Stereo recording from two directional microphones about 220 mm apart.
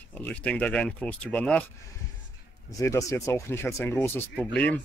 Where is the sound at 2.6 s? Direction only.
15° left (ahead or behind).